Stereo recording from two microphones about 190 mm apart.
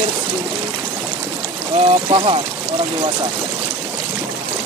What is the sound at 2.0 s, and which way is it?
Speech, 30° right (ahead or behind).